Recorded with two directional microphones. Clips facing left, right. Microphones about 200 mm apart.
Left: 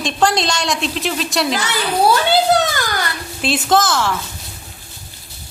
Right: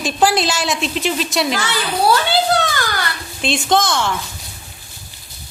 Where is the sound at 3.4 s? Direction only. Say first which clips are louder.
Left 1 dB; 5° left (ahead or behind).